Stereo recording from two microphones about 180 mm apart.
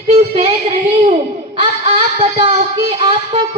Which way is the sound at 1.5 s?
30° right (ahead or behind).